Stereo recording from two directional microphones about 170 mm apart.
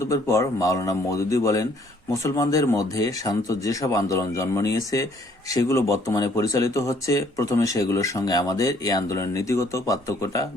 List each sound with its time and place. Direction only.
0.0 s speech: 15° left (ahead or behind)